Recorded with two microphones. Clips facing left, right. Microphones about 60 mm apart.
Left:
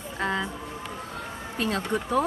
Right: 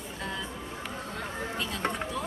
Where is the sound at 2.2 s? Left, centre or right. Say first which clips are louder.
Left 10 dB; left.